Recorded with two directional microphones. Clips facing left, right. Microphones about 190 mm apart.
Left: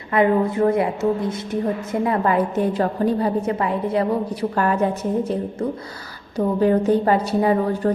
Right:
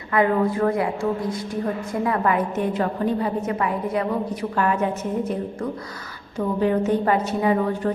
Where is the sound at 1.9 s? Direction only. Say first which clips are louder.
Left 2 dB; 25° left (ahead or behind).